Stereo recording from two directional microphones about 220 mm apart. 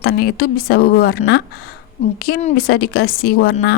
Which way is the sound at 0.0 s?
45° left (ahead or behind).